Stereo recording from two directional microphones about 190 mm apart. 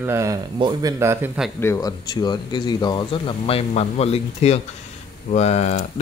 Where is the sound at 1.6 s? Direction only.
15° left (ahead or behind).